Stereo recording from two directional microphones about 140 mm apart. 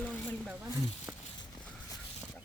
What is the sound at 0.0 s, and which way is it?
Wild animals, 5° left (ahead or behind).